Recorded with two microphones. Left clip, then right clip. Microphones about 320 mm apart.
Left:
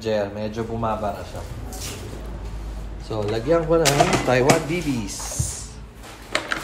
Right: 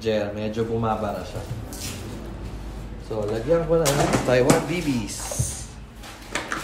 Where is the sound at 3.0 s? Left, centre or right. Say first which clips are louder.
Left 1 dB; left.